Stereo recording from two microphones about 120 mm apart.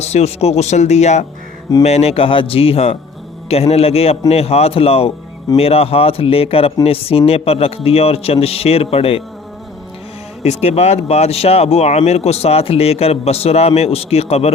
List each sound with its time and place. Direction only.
0.0 s speech: 65° left (ahead or behind)
10.4 s speech: 65° left (ahead or behind)